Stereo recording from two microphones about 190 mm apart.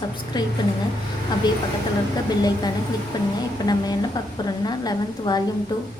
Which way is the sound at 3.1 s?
20° left (ahead or behind).